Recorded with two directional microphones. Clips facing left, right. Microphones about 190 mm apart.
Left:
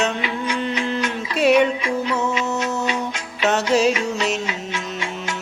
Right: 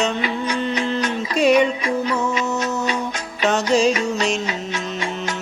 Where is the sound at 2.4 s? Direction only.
40° right (ahead or behind).